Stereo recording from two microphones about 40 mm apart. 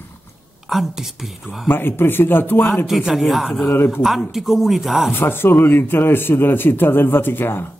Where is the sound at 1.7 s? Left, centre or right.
Left.